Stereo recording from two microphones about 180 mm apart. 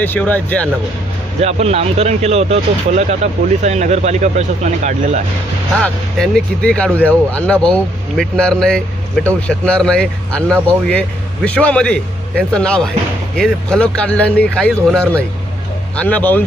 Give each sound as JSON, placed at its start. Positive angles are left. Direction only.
{"t": 0.0, "sound": "speech", "side_deg": 10}
{"t": 1.4, "sound": "speech", "side_deg": -35}
{"t": 5.7, "sound": "speech", "side_deg": 5}